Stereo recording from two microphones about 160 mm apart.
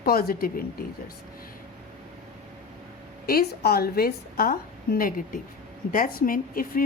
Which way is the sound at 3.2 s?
70° left (ahead or behind).